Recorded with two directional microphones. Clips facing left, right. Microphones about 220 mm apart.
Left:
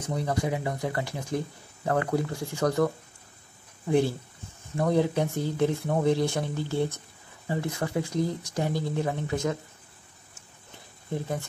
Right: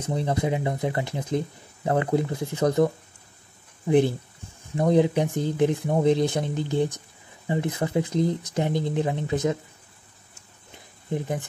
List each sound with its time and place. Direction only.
0.0 s speech: 25° right (ahead or behind)
11.1 s speech: 15° right (ahead or behind)